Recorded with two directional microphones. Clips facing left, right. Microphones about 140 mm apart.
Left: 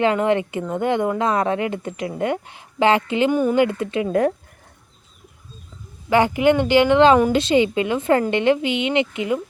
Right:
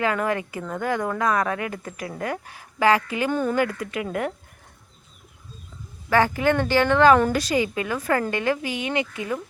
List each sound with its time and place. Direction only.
0.0 s speech: 25° left (ahead or behind)
6.1 s speech: 20° left (ahead or behind)